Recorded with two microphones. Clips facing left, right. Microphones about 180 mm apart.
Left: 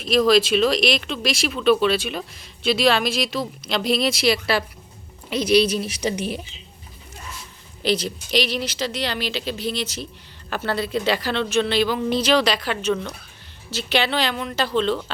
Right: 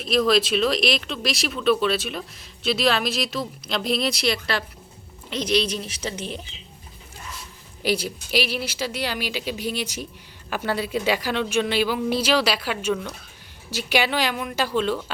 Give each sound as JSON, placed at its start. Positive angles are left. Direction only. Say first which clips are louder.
{"t": 0.0, "sound": "a woman's voice", "louder": "left 3 dB", "side_deg": 0}
{"t": 7.8, "sound": "a woman's voice", "louder": "left 2 dB", "side_deg": -10}